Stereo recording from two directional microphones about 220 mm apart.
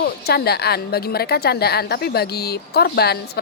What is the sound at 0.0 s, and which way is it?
A woman's voice, 45° left (ahead or behind).